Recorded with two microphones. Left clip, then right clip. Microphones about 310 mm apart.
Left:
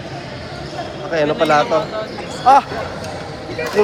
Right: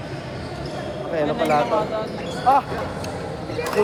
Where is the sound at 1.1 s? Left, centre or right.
Left.